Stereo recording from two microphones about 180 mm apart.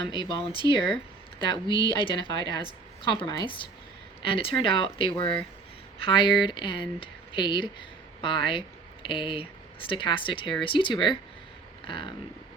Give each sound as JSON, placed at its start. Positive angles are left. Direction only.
{"t": 0.1, "sound": "speech", "side_deg": 25}